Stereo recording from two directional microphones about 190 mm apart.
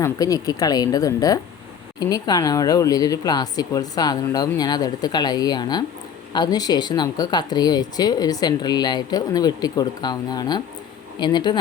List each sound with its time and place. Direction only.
0.0 s speech: 20° left (ahead or behind)